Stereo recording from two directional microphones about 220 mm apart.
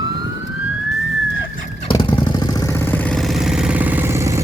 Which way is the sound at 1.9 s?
20° left (ahead or behind).